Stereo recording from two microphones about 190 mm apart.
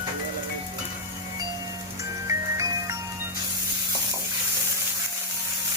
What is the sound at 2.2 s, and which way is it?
Music, 15° right (ahead or behind).